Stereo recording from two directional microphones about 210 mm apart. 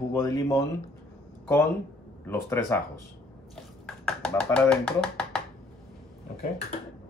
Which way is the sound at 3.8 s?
5° left (ahead or behind).